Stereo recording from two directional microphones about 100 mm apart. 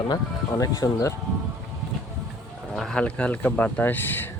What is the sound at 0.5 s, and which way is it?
Speech, 35° left (ahead or behind).